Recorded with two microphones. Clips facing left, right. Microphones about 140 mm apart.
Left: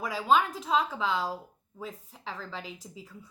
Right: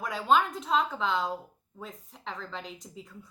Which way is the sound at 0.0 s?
Centre (ahead or behind).